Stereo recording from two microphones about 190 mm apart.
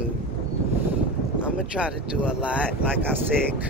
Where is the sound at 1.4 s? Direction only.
5° right (ahead or behind).